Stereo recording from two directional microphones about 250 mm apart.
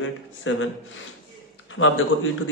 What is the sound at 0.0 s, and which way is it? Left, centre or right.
Speech, left.